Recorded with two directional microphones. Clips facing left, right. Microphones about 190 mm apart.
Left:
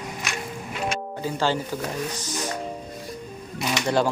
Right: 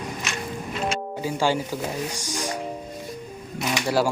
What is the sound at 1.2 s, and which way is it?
Speech, 10° right (ahead or behind).